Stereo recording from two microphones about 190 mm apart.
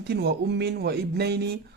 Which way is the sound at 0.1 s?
60° right (ahead or behind).